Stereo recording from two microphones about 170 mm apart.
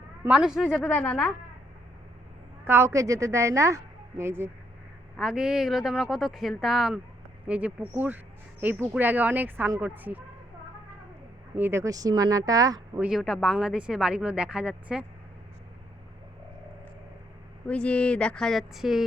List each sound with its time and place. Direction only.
0.3 s speech: 5° right (ahead or behind)
0.9 s a woman's voice: 10° left (ahead or behind)
2.6 s a woman's voice: 15° right (ahead or behind)
5.1 s speech: 5° right (ahead or behind)
11.5 s speech: 15° right (ahead or behind)
13.0 s speech: centre (ahead or behind)
17.7 s speech: 5° left (ahead or behind)